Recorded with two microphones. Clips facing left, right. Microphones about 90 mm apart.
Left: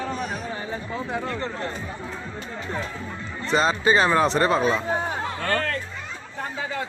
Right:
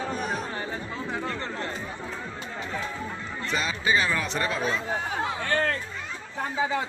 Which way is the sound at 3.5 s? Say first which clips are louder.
Left 6 dB; 35° left (ahead or behind).